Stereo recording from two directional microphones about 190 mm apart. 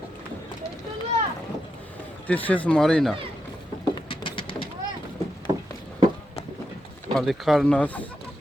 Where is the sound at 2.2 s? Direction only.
10° left (ahead or behind).